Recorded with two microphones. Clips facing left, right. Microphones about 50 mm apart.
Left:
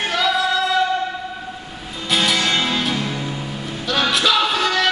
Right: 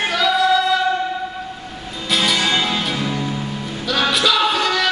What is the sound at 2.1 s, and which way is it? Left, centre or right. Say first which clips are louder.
Music: even; centre.